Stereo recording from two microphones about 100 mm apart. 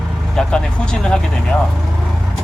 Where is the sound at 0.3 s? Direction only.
10° left (ahead or behind).